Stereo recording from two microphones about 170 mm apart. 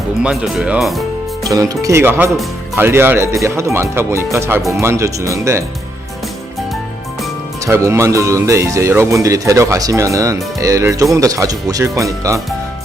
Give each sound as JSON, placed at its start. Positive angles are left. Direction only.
{"t": 0.2, "sound": "speech", "side_deg": -5}
{"t": 1.5, "sound": "speech", "side_deg": -20}
{"t": 7.6, "sound": "speech", "side_deg": -15}